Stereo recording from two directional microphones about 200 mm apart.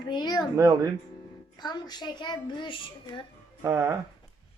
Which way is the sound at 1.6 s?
20° left (ahead or behind).